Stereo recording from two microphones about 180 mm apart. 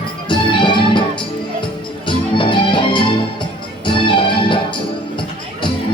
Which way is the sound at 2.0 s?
25° left (ahead or behind).